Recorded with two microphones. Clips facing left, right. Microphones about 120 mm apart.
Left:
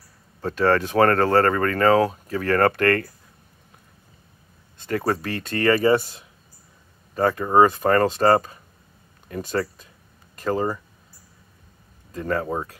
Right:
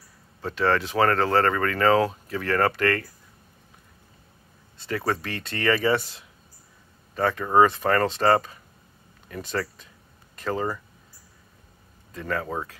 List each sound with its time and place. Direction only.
0.4 s speech: 40° left (ahead or behind)
4.7 s speech: 50° left (ahead or behind)
7.2 s speech: 40° left (ahead or behind)
12.1 s speech: 35° left (ahead or behind)